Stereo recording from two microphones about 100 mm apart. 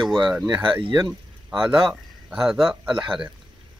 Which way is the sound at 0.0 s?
Centre (ahead or behind).